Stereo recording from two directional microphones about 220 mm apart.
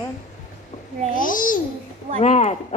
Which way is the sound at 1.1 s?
40° left (ahead or behind).